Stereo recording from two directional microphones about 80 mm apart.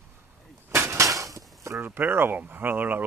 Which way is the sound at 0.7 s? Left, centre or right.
Right.